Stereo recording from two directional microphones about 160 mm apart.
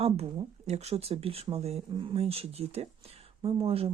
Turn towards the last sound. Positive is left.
turn(degrees=-35)  # may be behind; listen again after turning